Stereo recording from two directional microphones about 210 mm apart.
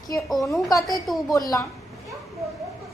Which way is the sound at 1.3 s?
15° left (ahead or behind).